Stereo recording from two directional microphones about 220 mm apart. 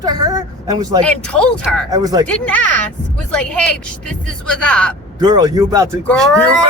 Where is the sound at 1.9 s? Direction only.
15° right (ahead or behind).